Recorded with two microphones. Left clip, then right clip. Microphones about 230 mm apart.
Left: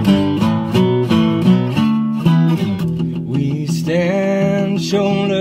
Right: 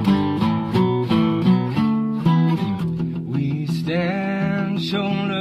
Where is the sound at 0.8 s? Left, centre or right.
Left.